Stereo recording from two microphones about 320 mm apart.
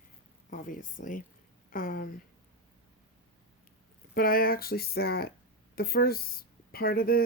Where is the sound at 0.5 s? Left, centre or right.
Left.